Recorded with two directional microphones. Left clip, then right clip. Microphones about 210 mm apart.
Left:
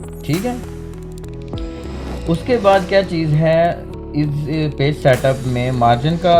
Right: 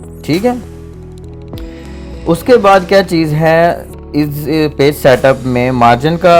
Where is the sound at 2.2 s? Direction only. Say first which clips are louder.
Right 7 dB; 45° right (ahead or behind).